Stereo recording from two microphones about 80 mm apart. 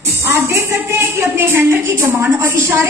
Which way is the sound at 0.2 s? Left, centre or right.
Right.